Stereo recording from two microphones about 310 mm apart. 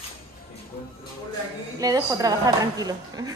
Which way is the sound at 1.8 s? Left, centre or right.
Centre.